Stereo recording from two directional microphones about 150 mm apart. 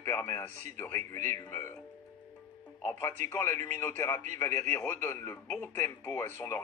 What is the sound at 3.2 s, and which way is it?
Speech, 55° right (ahead or behind).